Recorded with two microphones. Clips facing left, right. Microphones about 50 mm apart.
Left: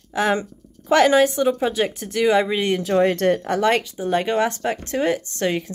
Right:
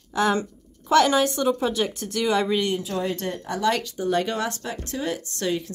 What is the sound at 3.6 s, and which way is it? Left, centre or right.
Speech, left.